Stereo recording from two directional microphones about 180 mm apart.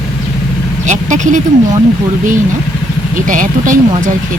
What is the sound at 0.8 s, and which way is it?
Speech, 40° right (ahead or behind).